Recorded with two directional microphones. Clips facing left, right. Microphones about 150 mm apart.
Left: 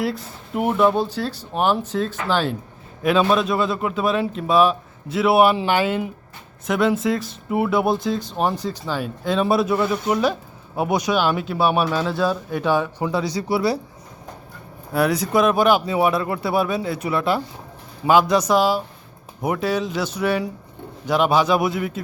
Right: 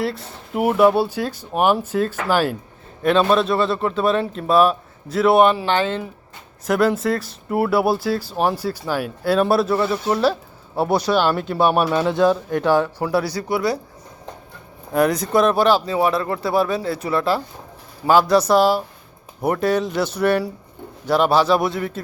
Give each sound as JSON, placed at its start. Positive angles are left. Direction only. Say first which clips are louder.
{"t": 0.5, "sound": "speech", "louder": "right 3 dB", "side_deg": -5}
{"t": 3.0, "sound": "speech", "louder": "right 2 dB", "side_deg": 5}
{"t": 6.7, "sound": "speech", "louder": "right 1 dB", "side_deg": 0}
{"t": 10.1, "sound": "speech", "louder": "right 1 dB", "side_deg": 15}
{"t": 12.0, "sound": "speech", "louder": "right 5 dB", "side_deg": -15}
{"t": 12.5, "sound": "speech", "louder": "right 3 dB", "side_deg": 10}
{"t": 13.2, "sound": "speech", "louder": "left 1 dB", "side_deg": 25}
{"t": 14.9, "sound": "speech", "louder": "right 2 dB", "side_deg": 5}
{"t": 16.4, "sound": "speech", "louder": "right 3 dB", "side_deg": 5}
{"t": 16.6, "sound": "speech", "louder": "right 1 dB", "side_deg": 20}
{"t": 18.1, "sound": "speech", "louder": "right 2 dB", "side_deg": 15}
{"t": 21.4, "sound": "speech", "louder": "right 1 dB", "side_deg": 0}